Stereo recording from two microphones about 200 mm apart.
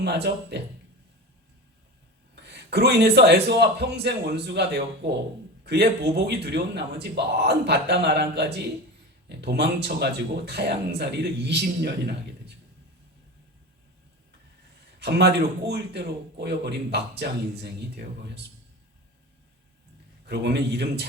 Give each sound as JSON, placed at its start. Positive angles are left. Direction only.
{"t": 0.0, "sound": "speech", "side_deg": -55}
{"t": 2.3, "sound": "speech", "side_deg": -55}
{"t": 14.9, "sound": "speech", "side_deg": -55}
{"t": 20.2, "sound": "speech", "side_deg": -55}